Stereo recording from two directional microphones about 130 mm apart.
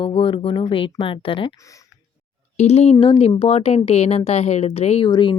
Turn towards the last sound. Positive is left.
turn(degrees=35)  # may be behind; listen again after turning